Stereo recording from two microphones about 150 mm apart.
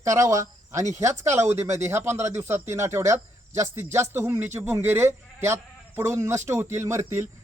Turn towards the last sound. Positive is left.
turn(degrees=-20)  # may be behind; listen again after turning